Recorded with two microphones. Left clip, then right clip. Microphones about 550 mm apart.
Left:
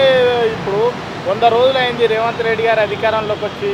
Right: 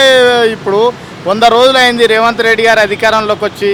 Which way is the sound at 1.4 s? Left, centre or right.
Right.